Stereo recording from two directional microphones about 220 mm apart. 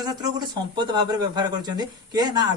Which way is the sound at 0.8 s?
20° right (ahead or behind).